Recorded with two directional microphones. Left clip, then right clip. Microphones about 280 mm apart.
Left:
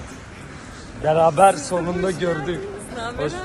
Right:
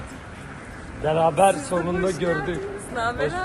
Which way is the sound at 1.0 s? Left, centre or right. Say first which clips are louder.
Left 4 dB; left.